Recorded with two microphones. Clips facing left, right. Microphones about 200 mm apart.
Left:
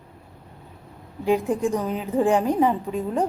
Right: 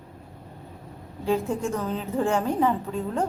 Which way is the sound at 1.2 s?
15° left (ahead or behind).